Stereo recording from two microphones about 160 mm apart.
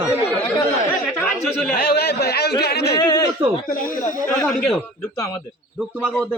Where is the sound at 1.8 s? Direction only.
75° left (ahead or behind).